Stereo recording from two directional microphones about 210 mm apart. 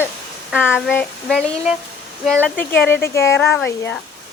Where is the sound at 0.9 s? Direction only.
5° left (ahead or behind).